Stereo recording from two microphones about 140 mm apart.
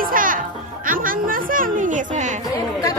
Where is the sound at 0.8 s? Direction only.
80° right; by 2.3 s 65° right (ahead or behind).